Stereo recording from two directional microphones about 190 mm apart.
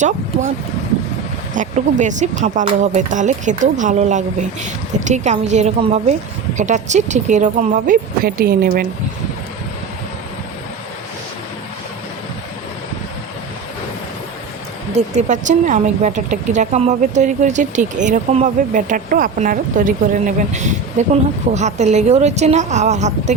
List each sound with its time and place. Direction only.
1.5 s speech: 40° right (ahead or behind)
14.9 s speech: 40° right (ahead or behind)